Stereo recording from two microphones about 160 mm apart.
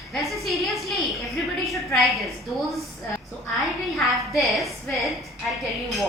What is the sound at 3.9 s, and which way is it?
A woman's voice, centre (ahead or behind).